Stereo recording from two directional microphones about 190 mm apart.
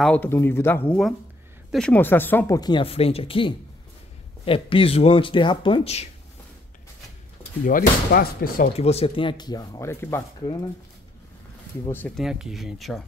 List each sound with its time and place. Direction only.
0.0 s speech: 10° left (ahead or behind); by 6.0 s 30° left (ahead or behind)
7.6 s speech: 45° left (ahead or behind)
8.7 s speech: 35° left (ahead or behind); by 10.6 s 15° left (ahead or behind)
11.8 s speech: 10° left (ahead or behind)
12.2 s speech: 5° right (ahead or behind)